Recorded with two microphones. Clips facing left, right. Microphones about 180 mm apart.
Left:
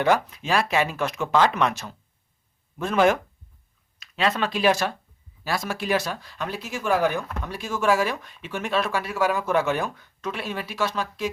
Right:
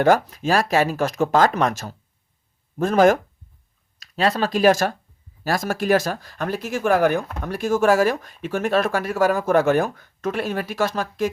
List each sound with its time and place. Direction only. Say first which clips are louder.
0.0 s speech: right 5 dB; 45° right (ahead or behind)